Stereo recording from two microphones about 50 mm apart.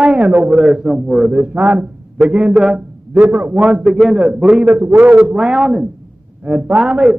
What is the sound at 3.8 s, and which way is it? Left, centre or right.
Speech, centre.